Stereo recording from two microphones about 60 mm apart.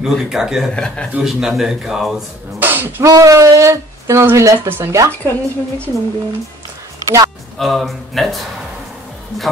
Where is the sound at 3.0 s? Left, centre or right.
Right.